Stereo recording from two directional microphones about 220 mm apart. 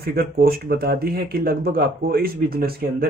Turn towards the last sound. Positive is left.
turn(degrees=-45)  # may be behind; listen again after turning